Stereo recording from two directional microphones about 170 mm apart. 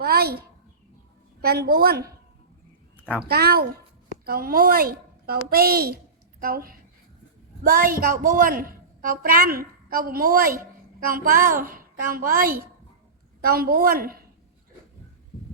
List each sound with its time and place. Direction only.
0.0 s a sound: 65° right (ahead or behind)
1.4 s a woman's voice: 65° right (ahead or behind)
3.2 s a woman's voice: 65° right (ahead or behind)